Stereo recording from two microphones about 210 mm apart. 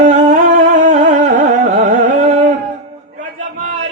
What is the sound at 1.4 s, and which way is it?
Carnatic music, 35° right (ahead or behind).